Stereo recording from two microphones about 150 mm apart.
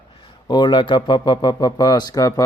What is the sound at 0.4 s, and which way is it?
Speech, 30° left (ahead or behind).